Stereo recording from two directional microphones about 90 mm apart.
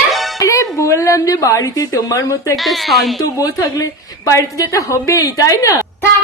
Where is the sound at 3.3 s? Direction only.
40° left (ahead or behind).